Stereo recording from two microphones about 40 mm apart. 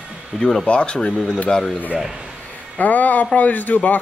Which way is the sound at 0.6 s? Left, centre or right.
Left.